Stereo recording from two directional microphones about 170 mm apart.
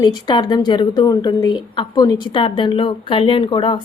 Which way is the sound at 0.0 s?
25° left (ahead or behind).